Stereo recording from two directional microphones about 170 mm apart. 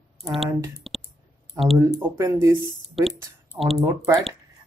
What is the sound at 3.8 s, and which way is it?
Speech, 20° right (ahead or behind).